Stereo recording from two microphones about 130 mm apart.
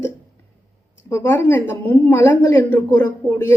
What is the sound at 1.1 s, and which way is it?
A woman's voice, 20° left (ahead or behind).